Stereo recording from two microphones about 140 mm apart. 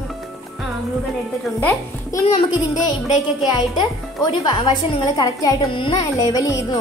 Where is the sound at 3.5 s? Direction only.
30° left (ahead or behind).